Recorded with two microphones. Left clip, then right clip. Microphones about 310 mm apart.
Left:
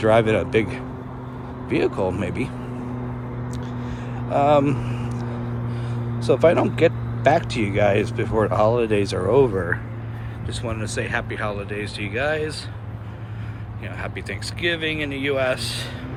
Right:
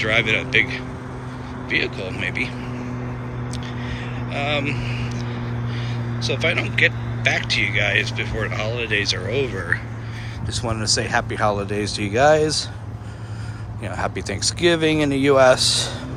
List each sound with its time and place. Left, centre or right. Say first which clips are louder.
0.0 s speech: left 2 dB; centre
3.5 s vehicle: right 2 dB; centre
6.2 s speech: left 5 dB; centre
10.5 s speech: right 6 dB; centre
13.8 s speech: right 6 dB; centre